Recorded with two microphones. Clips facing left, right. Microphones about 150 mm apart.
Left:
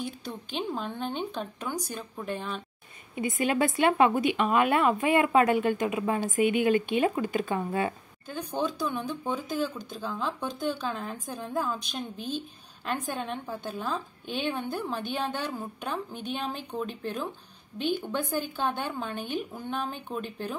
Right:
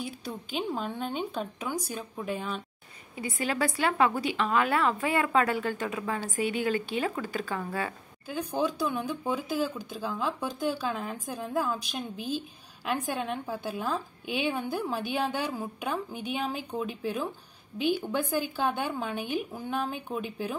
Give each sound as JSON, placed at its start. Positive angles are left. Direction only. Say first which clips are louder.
{"t": 0.0, "sound": "a woman's voice", "louder": "left 1 dB", "side_deg": -5}
{"t": 3.2, "sound": "speech", "louder": "left 4 dB", "side_deg": 20}
{"t": 8.3, "sound": "speech", "louder": "right 1 dB", "side_deg": -10}